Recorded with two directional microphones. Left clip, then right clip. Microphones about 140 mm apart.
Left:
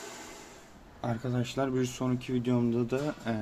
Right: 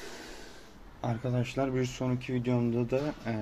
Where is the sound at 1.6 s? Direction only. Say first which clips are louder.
Even; 15° left (ahead or behind).